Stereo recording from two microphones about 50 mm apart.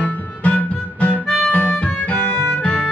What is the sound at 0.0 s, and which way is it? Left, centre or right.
Harmonica, left.